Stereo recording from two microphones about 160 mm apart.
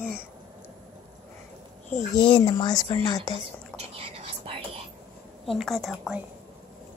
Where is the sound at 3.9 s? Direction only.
35° right (ahead or behind).